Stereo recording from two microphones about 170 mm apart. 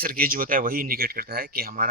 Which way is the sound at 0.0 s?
60° right (ahead or behind).